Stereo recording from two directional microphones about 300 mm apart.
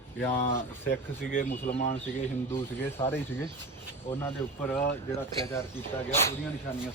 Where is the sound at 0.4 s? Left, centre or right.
Left.